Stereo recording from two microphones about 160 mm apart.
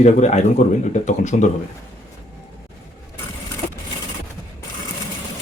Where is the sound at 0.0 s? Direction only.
45° left (ahead or behind).